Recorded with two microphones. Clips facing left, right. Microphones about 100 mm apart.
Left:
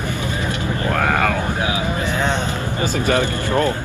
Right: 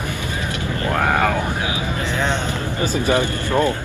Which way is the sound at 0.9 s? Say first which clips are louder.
Right 1 dB; 10° right (ahead or behind).